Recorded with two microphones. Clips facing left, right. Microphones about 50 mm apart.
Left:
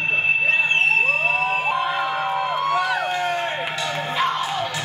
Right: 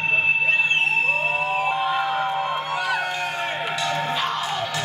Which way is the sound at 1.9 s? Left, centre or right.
Centre.